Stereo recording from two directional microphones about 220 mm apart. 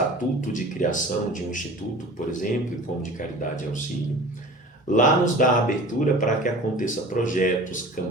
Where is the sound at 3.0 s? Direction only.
35° left (ahead or behind).